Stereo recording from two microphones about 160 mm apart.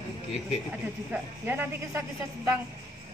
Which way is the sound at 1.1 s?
10° right (ahead or behind).